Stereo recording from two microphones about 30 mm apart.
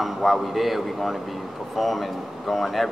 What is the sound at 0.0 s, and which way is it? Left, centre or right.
A man's voice, centre.